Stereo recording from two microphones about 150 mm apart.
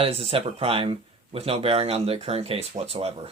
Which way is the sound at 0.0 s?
40° right (ahead or behind).